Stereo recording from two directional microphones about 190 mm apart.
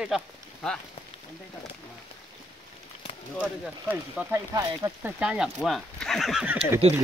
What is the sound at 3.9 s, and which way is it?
Speech, 10° right (ahead or behind).